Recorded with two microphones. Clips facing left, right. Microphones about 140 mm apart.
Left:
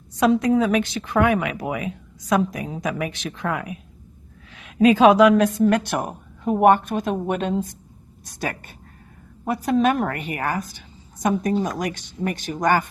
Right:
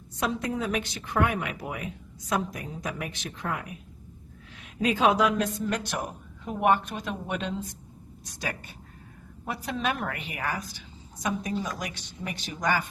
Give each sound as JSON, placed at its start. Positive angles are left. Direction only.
{"t": 0.2, "sound": "a woman's voice", "side_deg": 90}